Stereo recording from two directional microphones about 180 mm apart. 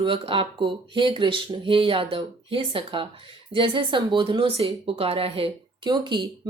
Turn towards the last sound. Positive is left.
turn(degrees=-25)  # may be behind; listen again after turning